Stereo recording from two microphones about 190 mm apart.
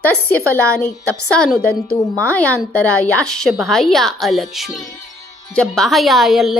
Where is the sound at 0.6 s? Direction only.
5° left (ahead or behind).